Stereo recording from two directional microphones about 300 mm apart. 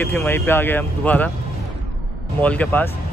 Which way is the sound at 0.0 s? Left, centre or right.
Centre.